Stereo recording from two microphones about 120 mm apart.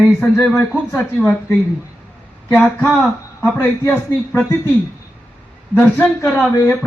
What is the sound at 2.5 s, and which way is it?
Speech, 10° left (ahead or behind).